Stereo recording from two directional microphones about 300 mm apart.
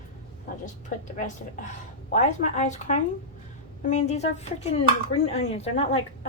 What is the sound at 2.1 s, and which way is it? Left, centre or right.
A woman's voice, left.